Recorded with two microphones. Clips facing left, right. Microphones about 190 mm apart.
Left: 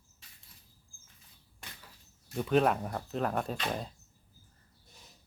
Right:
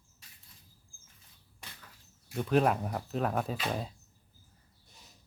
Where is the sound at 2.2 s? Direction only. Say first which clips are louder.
Even; centre (ahead or behind).